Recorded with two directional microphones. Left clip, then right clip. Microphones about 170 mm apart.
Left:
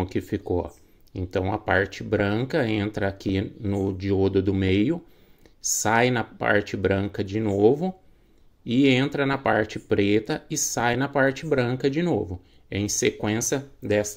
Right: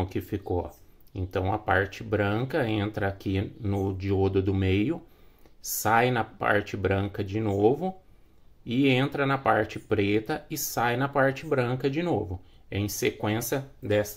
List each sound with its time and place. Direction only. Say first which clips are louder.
0.0 s speech: left 4 dB; 25° left (ahead or behind)